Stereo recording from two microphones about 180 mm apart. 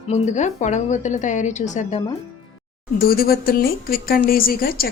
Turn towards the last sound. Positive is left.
turn(degrees=55)  # may be behind; listen again after turning